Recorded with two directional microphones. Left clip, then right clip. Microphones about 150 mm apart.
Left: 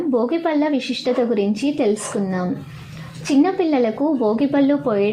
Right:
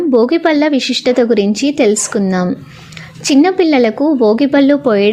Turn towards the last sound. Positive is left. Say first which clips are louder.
# right 7 dB
turn(degrees=-40)  # may be behind; listen again after turning